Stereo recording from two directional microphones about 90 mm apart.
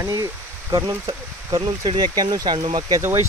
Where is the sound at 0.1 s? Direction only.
40° right (ahead or behind).